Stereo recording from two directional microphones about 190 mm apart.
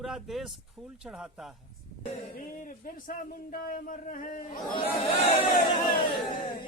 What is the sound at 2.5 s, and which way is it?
A man's voice, 45° left (ahead or behind).